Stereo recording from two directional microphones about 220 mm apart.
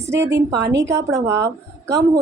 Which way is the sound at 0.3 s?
50° right (ahead or behind).